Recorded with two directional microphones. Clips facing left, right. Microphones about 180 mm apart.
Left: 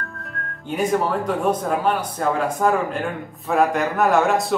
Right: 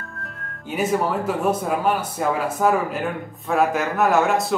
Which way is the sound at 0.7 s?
5° right (ahead or behind).